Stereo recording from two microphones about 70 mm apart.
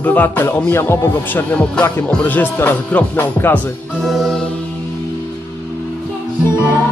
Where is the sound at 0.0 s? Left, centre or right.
Left.